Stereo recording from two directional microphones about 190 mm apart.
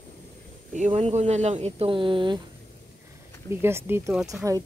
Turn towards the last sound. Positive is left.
turn(degrees=-15)  # may be behind; listen again after turning